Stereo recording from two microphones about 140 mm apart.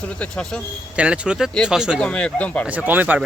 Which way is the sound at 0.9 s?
10° right (ahead or behind).